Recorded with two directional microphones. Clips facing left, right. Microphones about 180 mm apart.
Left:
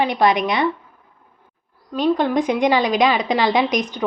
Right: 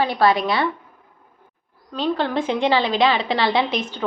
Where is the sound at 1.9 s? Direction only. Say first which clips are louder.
Left 4 dB; 15° left (ahead or behind).